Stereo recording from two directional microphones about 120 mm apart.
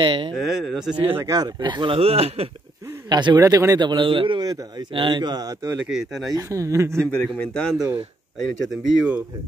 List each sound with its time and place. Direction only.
0.0 s speech: 45° right (ahead or behind)
0.3 s speech: 5° right (ahead or behind)
1.2 s a man's voice: 30° right (ahead or behind)
2.0 s speech: 55° right (ahead or behind)
3.1 s a man's voice: 35° right (ahead or behind)
5.9 s speech: 5° right (ahead or behind)
6.3 s speech: 25° right (ahead or behind)
6.9 s a man's voice: 5° left (ahead or behind)
8.4 s speech: 5° right (ahead or behind)